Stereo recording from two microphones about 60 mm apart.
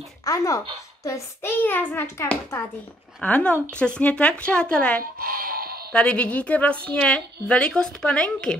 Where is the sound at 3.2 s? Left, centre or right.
Left.